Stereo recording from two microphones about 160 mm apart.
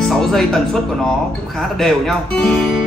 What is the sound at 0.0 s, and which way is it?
Music, centre (ahead or behind).